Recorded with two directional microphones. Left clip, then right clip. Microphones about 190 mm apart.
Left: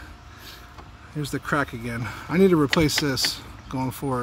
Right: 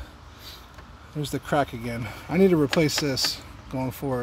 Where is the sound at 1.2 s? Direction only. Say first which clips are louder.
Even; centre (ahead or behind).